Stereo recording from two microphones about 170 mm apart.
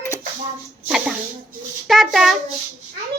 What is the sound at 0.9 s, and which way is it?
Speech, 5° right (ahead or behind).